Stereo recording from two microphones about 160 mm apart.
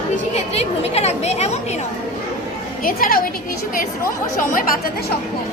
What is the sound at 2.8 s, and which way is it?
Speech, 60° left (ahead or behind).